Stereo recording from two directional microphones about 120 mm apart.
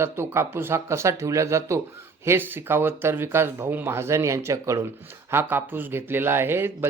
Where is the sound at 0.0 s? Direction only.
20° right (ahead or behind).